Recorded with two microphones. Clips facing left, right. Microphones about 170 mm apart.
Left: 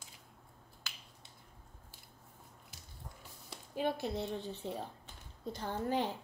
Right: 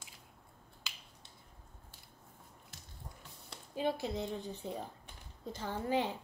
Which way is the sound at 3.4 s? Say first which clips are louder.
Even; 10° left (ahead or behind).